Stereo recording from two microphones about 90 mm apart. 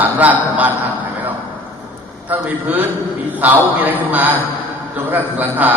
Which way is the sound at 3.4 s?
15° right (ahead or behind).